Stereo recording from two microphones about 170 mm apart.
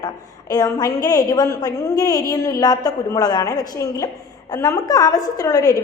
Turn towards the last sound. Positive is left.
turn(degrees=20)  # may be behind; listen again after turning